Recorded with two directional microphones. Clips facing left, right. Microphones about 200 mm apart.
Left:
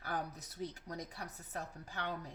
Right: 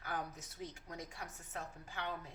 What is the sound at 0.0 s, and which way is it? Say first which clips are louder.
Speech: left 2 dB; 35° left (ahead or behind).